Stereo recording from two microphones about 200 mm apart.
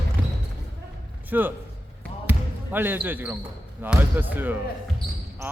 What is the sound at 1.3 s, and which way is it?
Speech, 10° right (ahead or behind).